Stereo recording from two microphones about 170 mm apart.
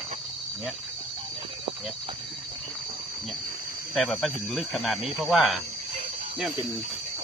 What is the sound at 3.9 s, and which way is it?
Speech, centre (ahead or behind).